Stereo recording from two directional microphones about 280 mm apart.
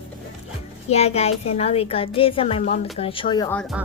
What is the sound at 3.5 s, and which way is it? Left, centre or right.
Speech, centre.